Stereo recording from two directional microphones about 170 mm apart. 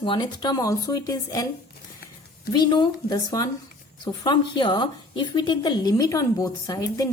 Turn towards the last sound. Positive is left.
turn(degrees=20)  # may be behind; listen again after turning